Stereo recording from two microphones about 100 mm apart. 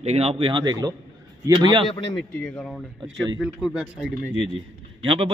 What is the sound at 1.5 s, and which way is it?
Speech, 50° right (ahead or behind).